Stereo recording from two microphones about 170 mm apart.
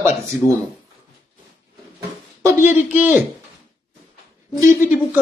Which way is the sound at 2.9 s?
10° right (ahead or behind).